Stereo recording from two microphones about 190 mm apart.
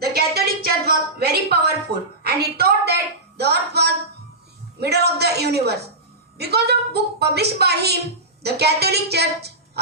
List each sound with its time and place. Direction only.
0.0 s a woman's voice: 55° right (ahead or behind)